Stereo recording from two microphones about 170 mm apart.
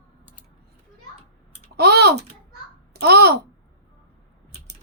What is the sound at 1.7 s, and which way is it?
A woman's voice, 70° right (ahead or behind).